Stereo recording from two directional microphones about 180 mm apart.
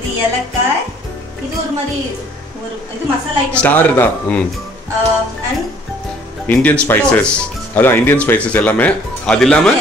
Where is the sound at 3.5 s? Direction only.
10° left (ahead or behind).